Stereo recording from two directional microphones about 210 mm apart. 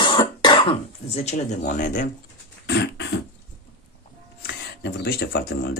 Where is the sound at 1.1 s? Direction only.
30° left (ahead or behind).